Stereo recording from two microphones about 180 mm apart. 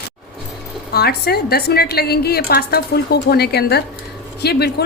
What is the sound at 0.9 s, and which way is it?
A woman's voice, 60° left (ahead or behind).